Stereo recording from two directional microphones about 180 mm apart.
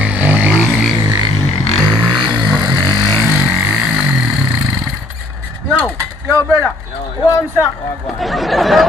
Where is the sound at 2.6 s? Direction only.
25° right (ahead or behind).